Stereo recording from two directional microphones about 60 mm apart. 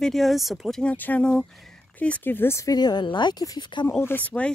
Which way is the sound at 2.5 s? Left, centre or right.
Left.